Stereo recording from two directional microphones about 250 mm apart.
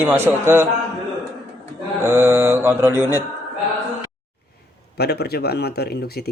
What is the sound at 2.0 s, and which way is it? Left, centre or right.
A man's voice, centre.